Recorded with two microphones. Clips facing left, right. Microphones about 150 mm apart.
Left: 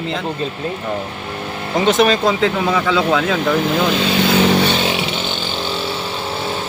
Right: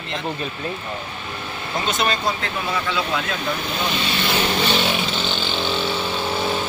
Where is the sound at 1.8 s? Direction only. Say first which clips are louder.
Left 9 dB; 90° left.